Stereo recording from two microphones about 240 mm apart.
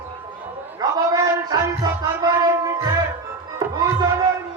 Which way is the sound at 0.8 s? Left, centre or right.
Centre.